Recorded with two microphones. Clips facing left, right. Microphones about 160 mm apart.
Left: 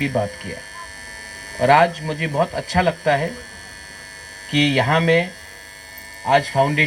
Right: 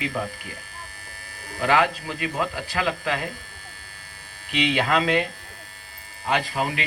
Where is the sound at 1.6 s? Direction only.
40° left (ahead or behind).